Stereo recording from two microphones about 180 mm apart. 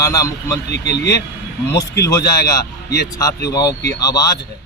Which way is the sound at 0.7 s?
70° left (ahead or behind).